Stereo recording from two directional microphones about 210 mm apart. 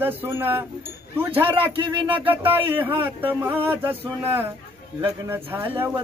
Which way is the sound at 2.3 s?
10° right (ahead or behind).